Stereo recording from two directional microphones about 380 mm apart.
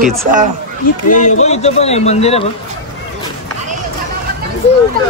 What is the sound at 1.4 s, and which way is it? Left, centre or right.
A man's voice, centre.